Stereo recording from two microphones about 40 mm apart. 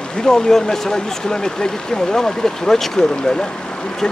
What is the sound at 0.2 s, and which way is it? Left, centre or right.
Speech, centre.